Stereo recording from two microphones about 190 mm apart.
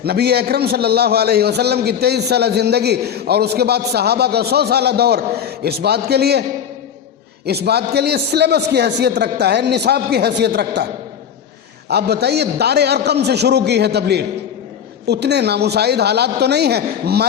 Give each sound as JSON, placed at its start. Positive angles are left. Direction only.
{"t": 0.0, "sound": "a man's voice", "side_deg": -55}
{"t": 7.4, "sound": "a man's voice", "side_deg": -60}
{"t": 11.9, "sound": "a man's voice", "side_deg": -60}